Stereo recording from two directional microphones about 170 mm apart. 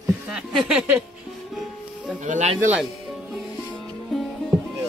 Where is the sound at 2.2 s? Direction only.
45° right (ahead or behind).